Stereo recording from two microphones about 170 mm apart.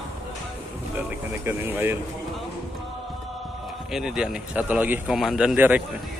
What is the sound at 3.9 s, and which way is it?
A man's voice, 5° right (ahead or behind).